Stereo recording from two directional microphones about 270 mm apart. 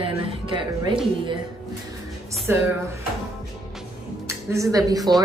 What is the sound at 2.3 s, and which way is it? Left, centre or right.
Music, centre.